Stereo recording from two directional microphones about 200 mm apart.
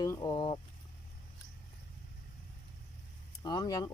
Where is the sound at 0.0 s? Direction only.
20° left (ahead or behind).